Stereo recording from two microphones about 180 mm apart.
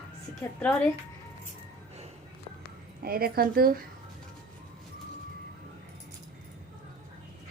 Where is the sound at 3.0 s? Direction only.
55° right (ahead or behind).